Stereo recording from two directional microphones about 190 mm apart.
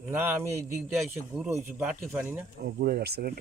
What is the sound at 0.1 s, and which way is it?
A man's voice, 10° right (ahead or behind).